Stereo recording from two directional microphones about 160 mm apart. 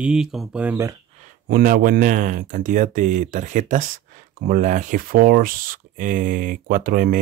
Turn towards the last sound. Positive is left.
turn(degrees=-60)  # may be behind; listen again after turning